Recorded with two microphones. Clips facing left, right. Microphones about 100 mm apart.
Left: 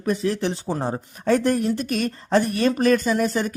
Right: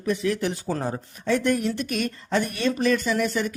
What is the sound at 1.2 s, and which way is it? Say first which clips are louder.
Speech: left 3 dB; 40° left (ahead or behind).